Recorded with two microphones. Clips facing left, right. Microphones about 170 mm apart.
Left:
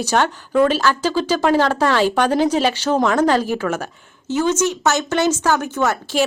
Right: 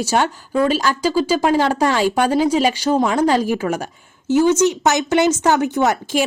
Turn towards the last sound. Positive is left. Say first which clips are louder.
# right 2 dB
turn(degrees=-15)  # may be behind; listen again after turning